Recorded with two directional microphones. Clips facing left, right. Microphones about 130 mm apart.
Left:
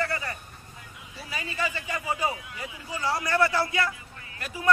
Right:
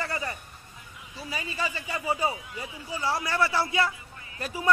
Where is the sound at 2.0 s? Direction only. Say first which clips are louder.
Right 2 dB; 30° right (ahead or behind).